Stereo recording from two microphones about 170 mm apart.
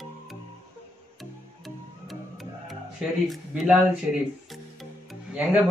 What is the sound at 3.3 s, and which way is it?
Speech, centre (ahead or behind).